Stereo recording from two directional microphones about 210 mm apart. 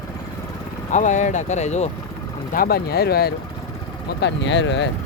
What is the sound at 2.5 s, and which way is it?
Speech, 45° left (ahead or behind).